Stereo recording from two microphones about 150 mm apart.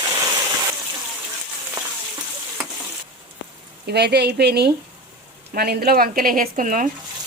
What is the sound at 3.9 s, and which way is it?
A woman's voice, 90° right.